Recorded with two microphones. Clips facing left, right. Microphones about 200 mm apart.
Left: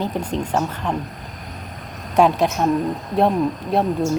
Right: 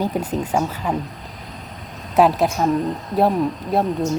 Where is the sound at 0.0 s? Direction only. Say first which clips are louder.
Right 1 dB; 5° right (ahead or behind).